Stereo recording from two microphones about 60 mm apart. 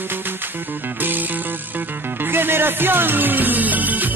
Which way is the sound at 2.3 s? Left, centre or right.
Right.